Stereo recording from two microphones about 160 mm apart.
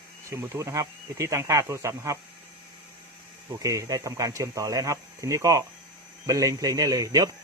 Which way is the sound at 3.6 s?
20° right (ahead or behind).